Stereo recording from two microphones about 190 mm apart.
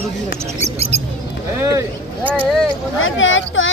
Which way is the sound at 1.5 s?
15° right (ahead or behind).